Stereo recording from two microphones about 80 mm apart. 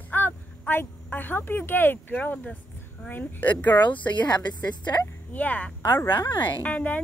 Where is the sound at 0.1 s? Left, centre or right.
Left.